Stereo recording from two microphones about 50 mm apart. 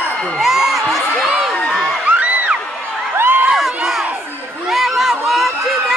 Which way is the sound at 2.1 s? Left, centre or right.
Right.